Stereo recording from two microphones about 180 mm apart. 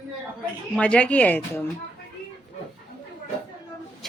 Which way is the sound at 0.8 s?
5° left (ahead or behind).